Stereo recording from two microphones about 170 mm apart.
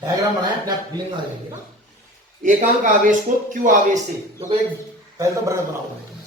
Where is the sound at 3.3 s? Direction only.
50° right (ahead or behind).